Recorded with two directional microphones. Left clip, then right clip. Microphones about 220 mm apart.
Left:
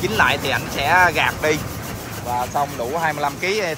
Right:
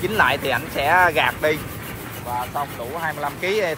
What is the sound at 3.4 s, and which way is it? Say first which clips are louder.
Speech: right 2 dB; 5° left (ahead or behind).